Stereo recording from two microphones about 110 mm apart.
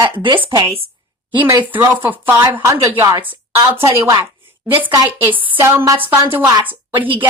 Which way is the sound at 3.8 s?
30° right (ahead or behind).